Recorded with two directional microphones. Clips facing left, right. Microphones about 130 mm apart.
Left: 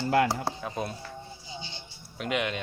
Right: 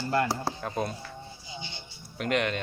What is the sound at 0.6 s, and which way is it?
Speech, 5° left (ahead or behind).